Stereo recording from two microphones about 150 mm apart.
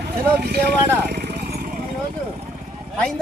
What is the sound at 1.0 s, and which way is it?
Vehicle, 90° right.